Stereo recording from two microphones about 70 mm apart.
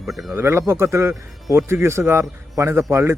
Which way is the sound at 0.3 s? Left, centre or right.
Right.